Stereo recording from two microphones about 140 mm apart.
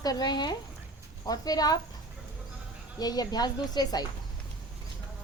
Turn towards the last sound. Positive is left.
turn(degrees=30)  # may be behind; listen again after turning